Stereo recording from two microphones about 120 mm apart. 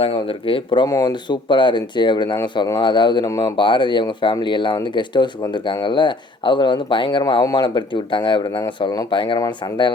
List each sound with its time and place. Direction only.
0.0 s speech: 50° left (ahead or behind)
0.9 s speech: 35° left (ahead or behind)